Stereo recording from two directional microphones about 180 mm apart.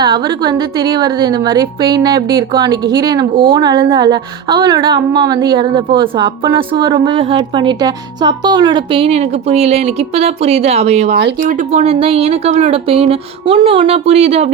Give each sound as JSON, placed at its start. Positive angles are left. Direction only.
{"t": 0.0, "sound": "a woman's voice", "side_deg": -25}
{"t": 11.1, "sound": "speech", "side_deg": -70}
{"t": 11.3, "sound": "speech", "side_deg": -45}